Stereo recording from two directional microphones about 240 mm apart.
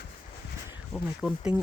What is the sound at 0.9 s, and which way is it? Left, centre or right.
Speech, centre.